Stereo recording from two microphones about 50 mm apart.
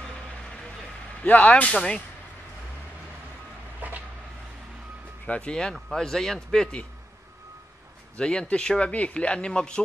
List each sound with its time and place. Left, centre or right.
1.2 s speech: left
1.7 s a man's voice: centre
3.8 s a sound: right
5.2 s a man's voice: left; by 6.8 s centre
8.2 s speech: centre